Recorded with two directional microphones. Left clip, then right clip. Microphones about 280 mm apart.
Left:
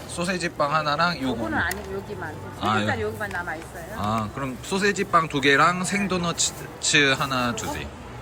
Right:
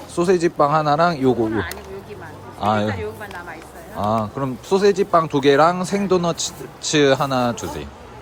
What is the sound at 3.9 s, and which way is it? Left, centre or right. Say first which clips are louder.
A man's voice: right 6 dB; centre.